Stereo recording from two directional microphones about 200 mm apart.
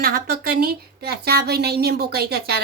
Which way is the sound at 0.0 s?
50° right (ahead or behind).